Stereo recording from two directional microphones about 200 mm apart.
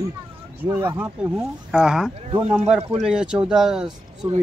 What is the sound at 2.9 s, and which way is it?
Speech, 5° right (ahead or behind).